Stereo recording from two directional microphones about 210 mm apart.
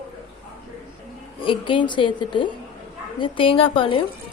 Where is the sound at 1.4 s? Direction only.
25° left (ahead or behind).